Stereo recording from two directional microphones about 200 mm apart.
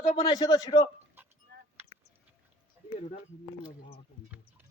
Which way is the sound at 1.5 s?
60° right (ahead or behind).